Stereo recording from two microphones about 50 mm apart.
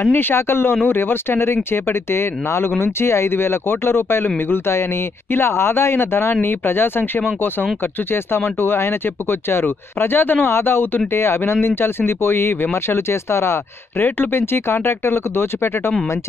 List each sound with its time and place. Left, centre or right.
0.0 s speech: left
8.5 s speech: left
14.0 s speech: left